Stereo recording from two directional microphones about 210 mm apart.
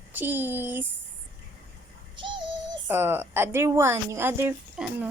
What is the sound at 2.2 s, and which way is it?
Synthetic singing, 25° right (ahead or behind).